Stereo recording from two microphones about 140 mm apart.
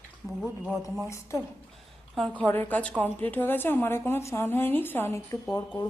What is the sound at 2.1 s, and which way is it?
Speech, centre (ahead or behind).